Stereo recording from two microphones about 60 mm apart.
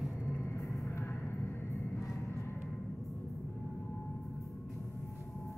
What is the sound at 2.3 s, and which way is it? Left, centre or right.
Vehicle, left.